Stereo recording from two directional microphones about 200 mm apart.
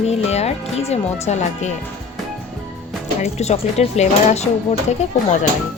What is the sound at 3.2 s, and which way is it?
Speech, 35° left (ahead or behind).